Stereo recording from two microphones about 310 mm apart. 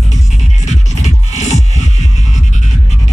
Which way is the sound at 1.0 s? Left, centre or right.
Left.